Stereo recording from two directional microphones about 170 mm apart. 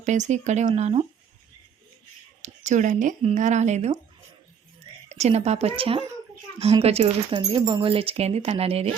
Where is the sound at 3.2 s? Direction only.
45° right (ahead or behind).